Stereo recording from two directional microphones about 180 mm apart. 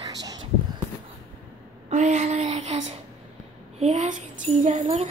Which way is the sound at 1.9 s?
40° right (ahead or behind).